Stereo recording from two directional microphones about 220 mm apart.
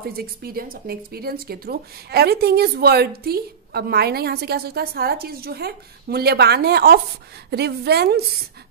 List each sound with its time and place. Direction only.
0.0 s speech: 45° right (ahead or behind)